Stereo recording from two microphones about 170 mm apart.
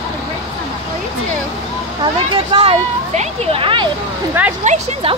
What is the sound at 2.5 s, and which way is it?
A woman's voice, 35° right (ahead or behind).